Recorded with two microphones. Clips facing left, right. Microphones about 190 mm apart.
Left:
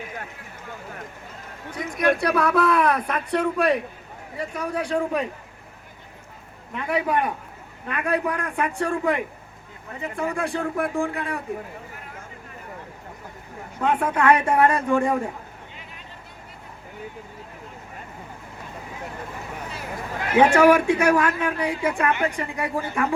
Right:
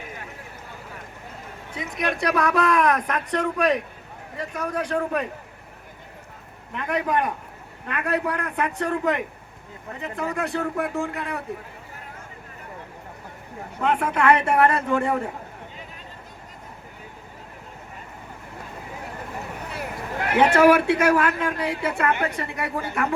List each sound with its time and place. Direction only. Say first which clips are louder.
2.0 s speech: left 3 dB; 5° left (ahead or behind)
6.7 s speech: left 1 dB; 10° left (ahead or behind)
13.8 s speech: even; 10° left (ahead or behind)
19.7 s a sound: right 3 dB; 60° right (ahead or behind)
21.4 s speech: left 1 dB; 10° left (ahead or behind)